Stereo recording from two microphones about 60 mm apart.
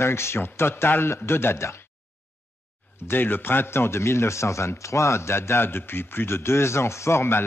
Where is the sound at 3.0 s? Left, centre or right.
Left.